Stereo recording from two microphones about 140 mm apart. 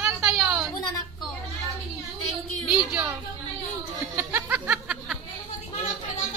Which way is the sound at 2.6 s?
10° right (ahead or behind).